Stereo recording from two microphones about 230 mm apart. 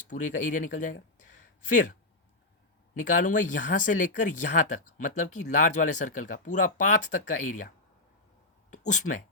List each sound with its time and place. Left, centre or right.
0.1 s speech: left
2.9 s speech: left
8.7 s speech: left